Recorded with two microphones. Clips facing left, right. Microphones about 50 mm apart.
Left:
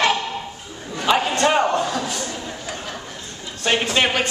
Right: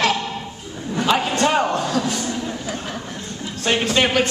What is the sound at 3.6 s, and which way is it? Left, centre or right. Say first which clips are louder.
Speech: right 1 dB; centre.